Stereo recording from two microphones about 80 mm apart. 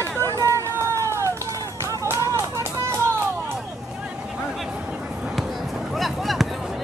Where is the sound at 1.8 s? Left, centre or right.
Right.